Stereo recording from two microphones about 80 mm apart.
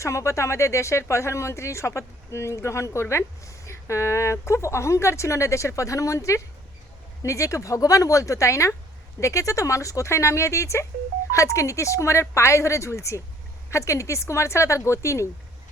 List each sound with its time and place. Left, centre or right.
0.0 s speech: left